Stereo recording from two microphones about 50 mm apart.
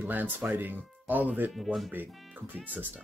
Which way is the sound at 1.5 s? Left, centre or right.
Centre.